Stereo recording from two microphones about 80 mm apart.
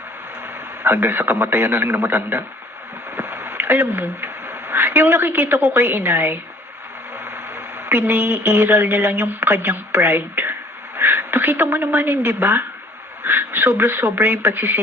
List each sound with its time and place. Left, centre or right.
0.4 s a man's voice: right